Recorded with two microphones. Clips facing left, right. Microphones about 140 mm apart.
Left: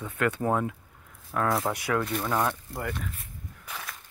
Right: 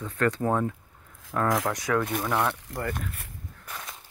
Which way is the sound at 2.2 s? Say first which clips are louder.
Right 1 dB; 15° right (ahead or behind).